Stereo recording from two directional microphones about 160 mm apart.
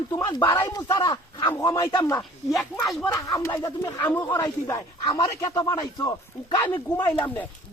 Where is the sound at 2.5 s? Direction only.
5° left (ahead or behind).